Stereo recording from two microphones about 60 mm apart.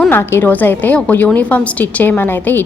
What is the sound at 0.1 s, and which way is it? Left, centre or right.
Speech, left.